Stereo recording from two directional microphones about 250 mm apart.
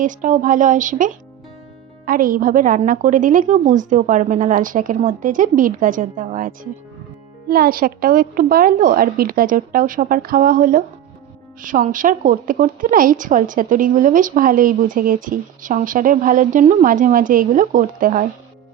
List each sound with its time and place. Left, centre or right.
0.0 s a woman's voice: right